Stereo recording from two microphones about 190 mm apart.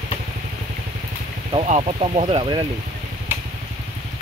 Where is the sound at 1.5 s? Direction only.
35° right (ahead or behind).